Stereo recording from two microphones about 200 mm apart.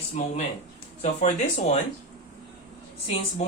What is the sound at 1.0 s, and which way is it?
Speech, 30° left (ahead or behind).